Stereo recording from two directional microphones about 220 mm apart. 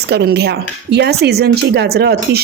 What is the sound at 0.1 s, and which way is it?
Speech, 50° right (ahead or behind).